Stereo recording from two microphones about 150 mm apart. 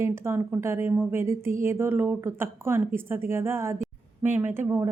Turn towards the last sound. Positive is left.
turn(degrees=-15)  # may be behind; listen again after turning